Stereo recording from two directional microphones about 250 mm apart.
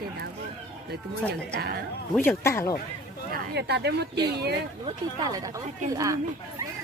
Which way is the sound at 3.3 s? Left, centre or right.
Right.